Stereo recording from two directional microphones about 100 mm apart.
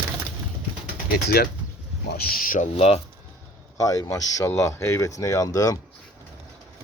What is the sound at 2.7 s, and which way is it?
Speech, 80° left.